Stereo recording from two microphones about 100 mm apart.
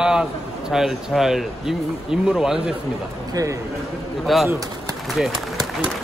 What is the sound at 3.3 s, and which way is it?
Speech, 35° right (ahead or behind).